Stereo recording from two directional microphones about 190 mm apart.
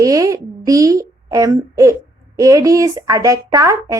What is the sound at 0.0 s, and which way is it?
A child's voice, 15° right (ahead or behind).